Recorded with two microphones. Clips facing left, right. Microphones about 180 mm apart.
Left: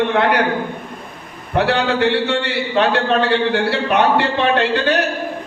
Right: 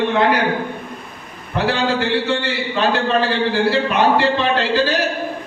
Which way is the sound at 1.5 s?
65° left (ahead or behind).